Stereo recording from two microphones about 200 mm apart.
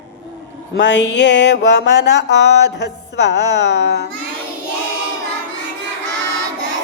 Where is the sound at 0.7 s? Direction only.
60° left (ahead or behind).